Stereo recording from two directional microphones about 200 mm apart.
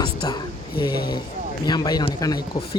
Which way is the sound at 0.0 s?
20° left (ahead or behind).